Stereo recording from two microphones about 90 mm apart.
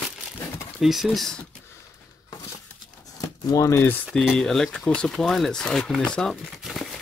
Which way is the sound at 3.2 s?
40° left (ahead or behind).